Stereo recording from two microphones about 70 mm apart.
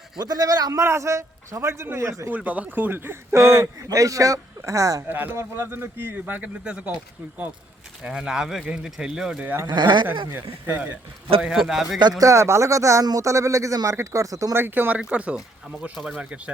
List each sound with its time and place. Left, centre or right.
0.2 s a man's voice: right
2.2 s speech: right
3.8 s a man's voice: right
5.0 s speech: right
8.0 s speech: centre
9.6 s speech: right
10.1 s speech: right
11.4 s a man's voice: centre
12.2 s a man's voice: right
14.5 s speech: right; by 16.4 s centre